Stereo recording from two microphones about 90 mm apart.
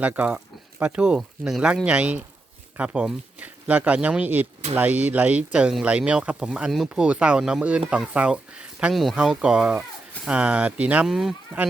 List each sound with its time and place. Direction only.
0.0 s speech: 20° right (ahead or behind)
8.9 s speech: centre (ahead or behind)
11.0 s speech: 5° right (ahead or behind)